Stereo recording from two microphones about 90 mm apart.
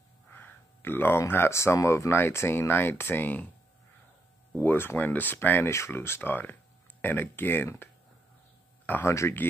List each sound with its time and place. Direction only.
0.3 s speech: 25° left (ahead or behind)
4.6 s speech: 25° left (ahead or behind)